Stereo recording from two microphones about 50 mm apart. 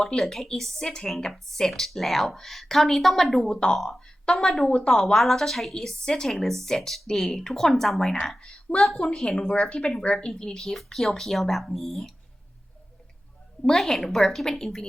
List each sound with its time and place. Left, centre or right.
0.0 s a woman's voice: centre
5.0 s a woman's voice: centre
8.4 s a woman's voice: centre
13.6 s a woman's voice: centre